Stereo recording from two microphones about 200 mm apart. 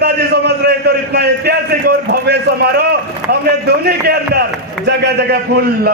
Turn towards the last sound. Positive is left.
turn(degrees=-55)  # may be behind; listen again after turning